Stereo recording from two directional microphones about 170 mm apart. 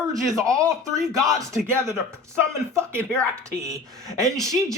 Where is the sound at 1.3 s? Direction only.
20° right (ahead or behind).